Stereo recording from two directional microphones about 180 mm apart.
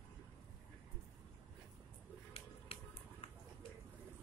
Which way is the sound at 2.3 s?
30° left (ahead or behind).